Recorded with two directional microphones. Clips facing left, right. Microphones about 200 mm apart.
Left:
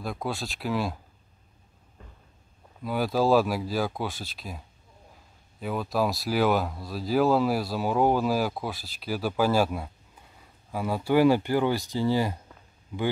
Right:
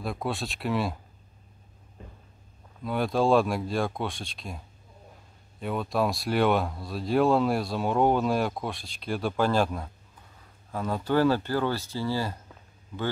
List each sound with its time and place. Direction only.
0.0 s speech: centre (ahead or behind)
2.0 s a sound: 20° right (ahead or behind)
2.8 s speech: 5° left (ahead or behind)